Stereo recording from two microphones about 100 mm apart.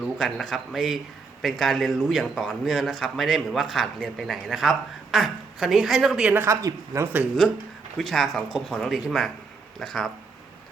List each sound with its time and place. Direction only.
0.0 s a man's voice: centre (ahead or behind)
6.3 s speech: 25° right (ahead or behind)
7.4 s a man's voice: 5° left (ahead or behind)